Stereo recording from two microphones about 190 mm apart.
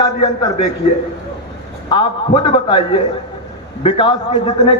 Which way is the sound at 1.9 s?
25° left (ahead or behind).